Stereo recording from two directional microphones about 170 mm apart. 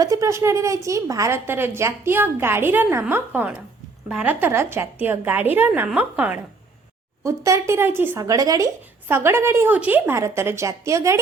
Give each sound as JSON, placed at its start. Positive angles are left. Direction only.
{"t": 0.0, "sound": "speech", "side_deg": -20}